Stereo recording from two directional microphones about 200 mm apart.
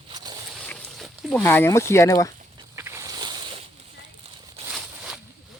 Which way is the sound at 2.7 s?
15° right (ahead or behind).